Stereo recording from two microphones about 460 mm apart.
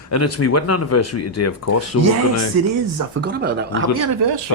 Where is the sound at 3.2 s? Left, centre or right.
Right.